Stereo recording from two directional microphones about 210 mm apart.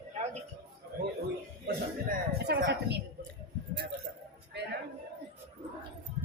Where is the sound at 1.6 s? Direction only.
50° right (ahead or behind).